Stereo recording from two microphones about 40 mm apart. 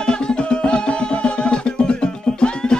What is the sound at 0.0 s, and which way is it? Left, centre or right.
Music, left.